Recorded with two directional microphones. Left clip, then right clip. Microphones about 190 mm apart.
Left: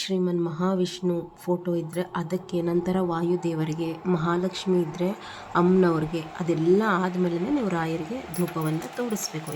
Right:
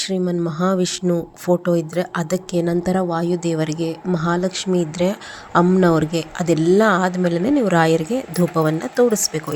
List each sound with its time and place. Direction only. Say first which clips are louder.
0.0 s a woman's voice: right 5 dB; 30° right (ahead or behind)